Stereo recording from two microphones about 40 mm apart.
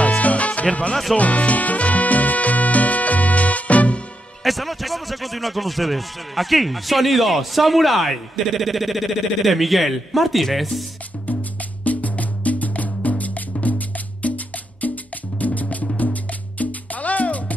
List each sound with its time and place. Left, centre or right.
0.0 s music: left
4.4 s speech: centre
11.8 s music: left